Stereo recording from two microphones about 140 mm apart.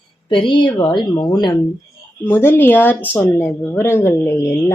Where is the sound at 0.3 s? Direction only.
35° left (ahead or behind).